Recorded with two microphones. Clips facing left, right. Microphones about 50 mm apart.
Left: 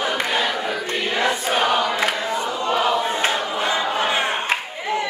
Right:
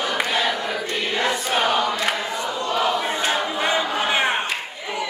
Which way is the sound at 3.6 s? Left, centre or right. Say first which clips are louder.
Left 2 dB; right.